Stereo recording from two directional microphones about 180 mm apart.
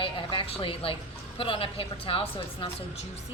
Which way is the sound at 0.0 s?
30° left (ahead or behind).